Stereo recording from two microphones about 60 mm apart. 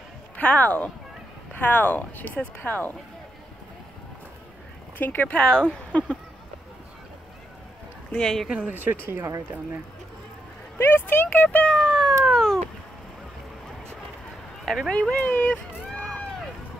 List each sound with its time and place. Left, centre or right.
0.4 s speech: left
4.9 s speech: left
5.3 s speech: centre
8.1 s speech: centre
8.5 s speech: centre
8.7 s speech: right
9.1 s speech: right
10.8 s speech: left; by 12.2 s centre
12.3 s cat: centre
14.6 s a sound: centre
14.9 s speech: centre
15.1 s run: left